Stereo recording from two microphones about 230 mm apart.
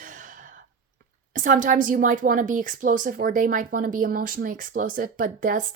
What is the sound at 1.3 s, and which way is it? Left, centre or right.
A woman's voice, right.